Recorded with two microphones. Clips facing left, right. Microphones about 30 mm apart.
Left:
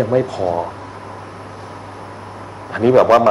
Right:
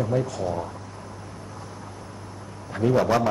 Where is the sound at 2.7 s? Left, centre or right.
Left.